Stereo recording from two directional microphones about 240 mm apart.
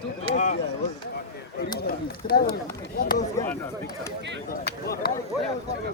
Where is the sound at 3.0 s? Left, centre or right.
Left.